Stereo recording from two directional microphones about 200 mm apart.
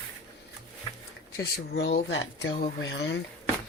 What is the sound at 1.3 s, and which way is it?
Speech, 50° left (ahead or behind).